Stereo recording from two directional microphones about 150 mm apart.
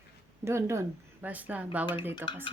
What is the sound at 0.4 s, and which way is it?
Speech, 20° right (ahead or behind).